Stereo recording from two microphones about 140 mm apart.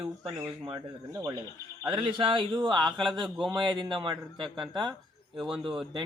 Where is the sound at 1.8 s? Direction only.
35° right (ahead or behind).